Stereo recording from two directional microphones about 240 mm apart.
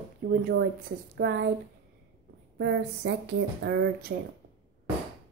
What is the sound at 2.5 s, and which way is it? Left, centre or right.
Speech, right.